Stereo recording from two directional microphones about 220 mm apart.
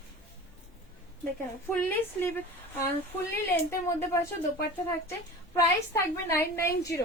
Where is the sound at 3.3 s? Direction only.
10° left (ahead or behind).